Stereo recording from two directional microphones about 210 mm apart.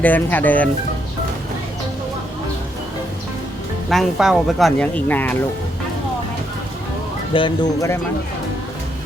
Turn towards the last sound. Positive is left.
turn(degrees=20)  # may be behind; listen again after turning